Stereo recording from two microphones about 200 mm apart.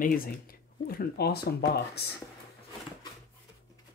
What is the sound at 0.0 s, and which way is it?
Speech, 45° left (ahead or behind).